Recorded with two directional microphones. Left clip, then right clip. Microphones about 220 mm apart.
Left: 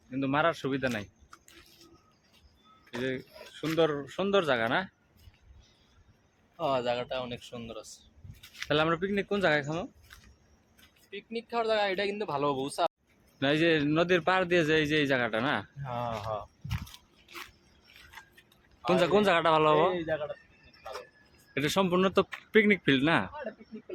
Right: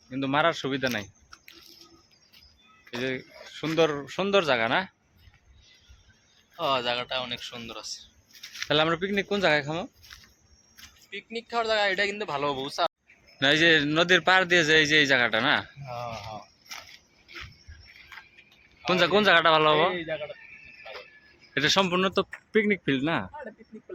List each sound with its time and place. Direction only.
0.1 s speech: 30° right (ahead or behind)
3.0 s speech: 30° right (ahead or behind)
6.6 s speech: 10° left (ahead or behind)
8.7 s speech: 25° right (ahead or behind)
11.1 s a man's voice: 5° right (ahead or behind)
18.9 s a man's voice: centre (ahead or behind)
21.5 s a man's voice: centre (ahead or behind)